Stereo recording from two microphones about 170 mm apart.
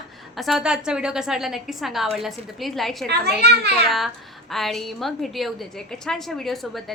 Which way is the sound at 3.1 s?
70° right (ahead or behind).